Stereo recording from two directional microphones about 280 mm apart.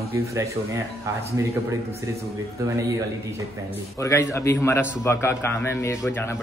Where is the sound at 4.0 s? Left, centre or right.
Centre.